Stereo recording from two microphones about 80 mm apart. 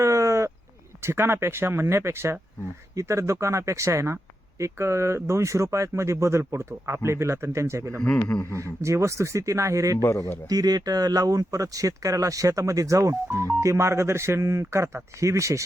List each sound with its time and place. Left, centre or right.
0.0 s a sound: right
1.0 s speech: right
8.0 s speech: centre
8.5 s speech: right
10.0 s a man's voice: left
10.4 s speech: right